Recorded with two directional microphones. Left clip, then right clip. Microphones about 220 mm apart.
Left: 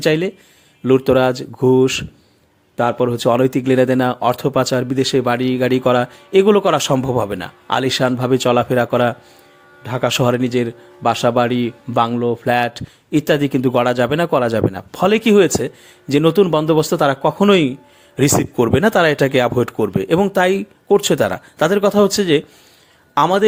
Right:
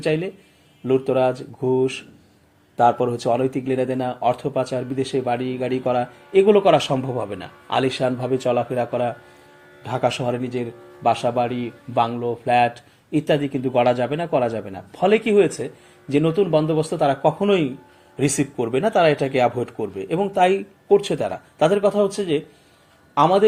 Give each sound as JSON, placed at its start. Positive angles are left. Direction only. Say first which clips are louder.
{"t": 0.0, "sound": "a man's voice", "louder": "left 6 dB", "side_deg": 45}
{"t": 2.7, "sound": "a man's voice", "louder": "left 1 dB", "side_deg": 35}
{"t": 9.8, "sound": "speech", "louder": "left 2 dB", "side_deg": 30}
{"t": 10.1, "sound": "a man's voice", "louder": "left 8 dB", "side_deg": 45}